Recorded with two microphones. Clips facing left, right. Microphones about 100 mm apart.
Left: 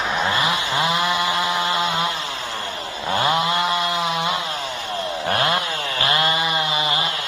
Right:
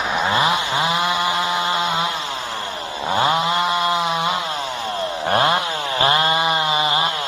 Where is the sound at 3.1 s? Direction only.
15° right (ahead or behind).